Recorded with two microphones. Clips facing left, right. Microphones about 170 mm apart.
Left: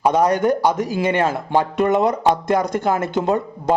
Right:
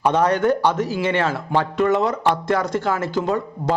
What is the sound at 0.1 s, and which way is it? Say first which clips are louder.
A man's voice: left 1 dB; 15° left (ahead or behind).